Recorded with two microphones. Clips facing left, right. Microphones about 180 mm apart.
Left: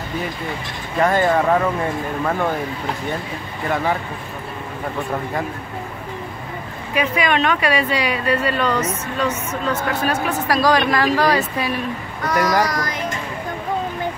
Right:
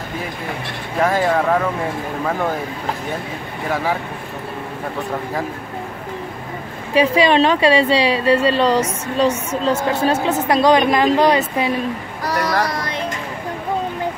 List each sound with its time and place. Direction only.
0.9 s speech: centre (ahead or behind)
3.6 s speech: 5° right (ahead or behind)
6.9 s a woman's voice: 30° right (ahead or behind)
12.2 s a sound: 30° right (ahead or behind)
12.6 s a woman's voice: 30° right (ahead or behind)